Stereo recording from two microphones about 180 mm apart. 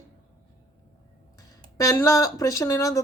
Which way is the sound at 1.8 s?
15° left (ahead or behind).